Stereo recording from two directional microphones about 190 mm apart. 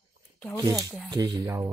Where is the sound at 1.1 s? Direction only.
20° right (ahead or behind).